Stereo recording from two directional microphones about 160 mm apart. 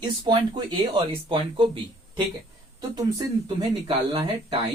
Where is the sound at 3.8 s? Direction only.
35° right (ahead or behind).